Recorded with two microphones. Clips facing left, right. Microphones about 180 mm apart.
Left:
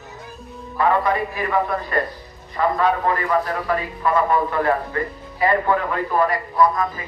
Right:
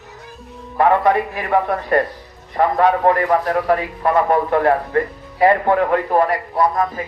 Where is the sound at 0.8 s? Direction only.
65° right (ahead or behind).